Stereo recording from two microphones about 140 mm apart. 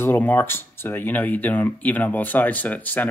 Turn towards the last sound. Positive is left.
turn(degrees=10)  # may be behind; listen again after turning